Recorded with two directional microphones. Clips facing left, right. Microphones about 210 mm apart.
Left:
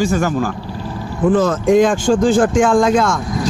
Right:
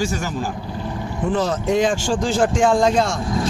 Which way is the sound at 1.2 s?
50° left (ahead or behind).